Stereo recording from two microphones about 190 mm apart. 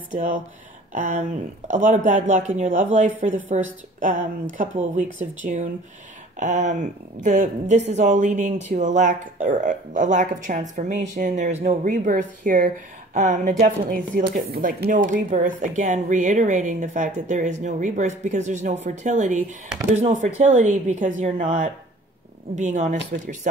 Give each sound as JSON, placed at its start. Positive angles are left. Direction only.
{"t": 0.1, "sound": "a woman's voice", "side_deg": -40}